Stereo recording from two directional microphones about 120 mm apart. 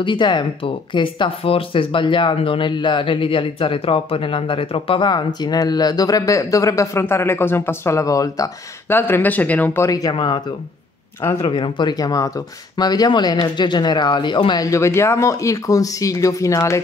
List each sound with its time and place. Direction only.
0.0 s speech: 40° left (ahead or behind); by 9.8 s 15° left (ahead or behind)
9.8 s speech: 30° left (ahead or behind)
10.1 s speech: 40° left (ahead or behind); by 16.8 s 25° left (ahead or behind)